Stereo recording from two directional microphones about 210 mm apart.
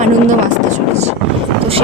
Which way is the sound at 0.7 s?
30° right (ahead or behind).